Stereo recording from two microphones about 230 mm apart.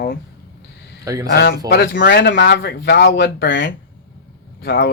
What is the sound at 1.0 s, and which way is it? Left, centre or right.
Speech, centre.